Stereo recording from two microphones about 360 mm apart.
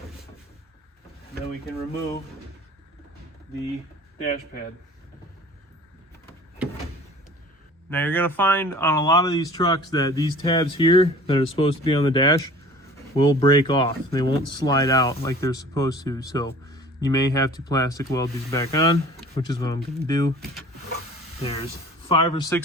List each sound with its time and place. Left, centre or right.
4.2 s speech: left
7.9 s speech: centre
21.4 s speech: centre